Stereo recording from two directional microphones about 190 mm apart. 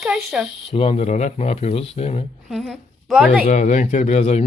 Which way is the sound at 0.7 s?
30° left (ahead or behind).